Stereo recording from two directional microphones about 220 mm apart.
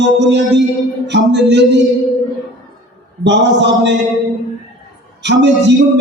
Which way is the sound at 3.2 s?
55° right (ahead or behind).